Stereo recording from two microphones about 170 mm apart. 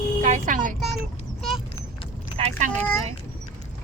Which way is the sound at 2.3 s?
40° right (ahead or behind).